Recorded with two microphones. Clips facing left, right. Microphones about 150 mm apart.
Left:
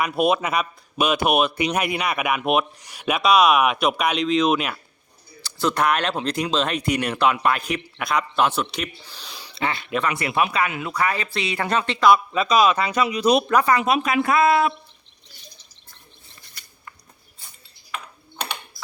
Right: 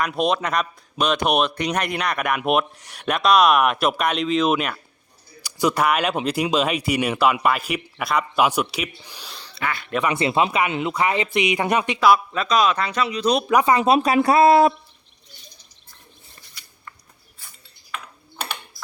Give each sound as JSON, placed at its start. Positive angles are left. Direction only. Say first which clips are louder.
{"t": 0.0, "sound": "speech", "louder": "left 1 dB", "side_deg": 5}
{"t": 5.4, "sound": "speech", "louder": "right 1 dB", "side_deg": -15}
{"t": 9.6, "sound": "speech", "louder": "left 1 dB", "side_deg": 25}
{"t": 10.1, "sound": "speech", "louder": "right 4 dB", "side_deg": -25}
{"t": 13.5, "sound": "speech", "louder": "right 2 dB", "side_deg": -20}